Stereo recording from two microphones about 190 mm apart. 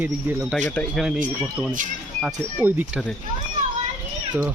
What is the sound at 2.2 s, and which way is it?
Speech, 10° right (ahead or behind).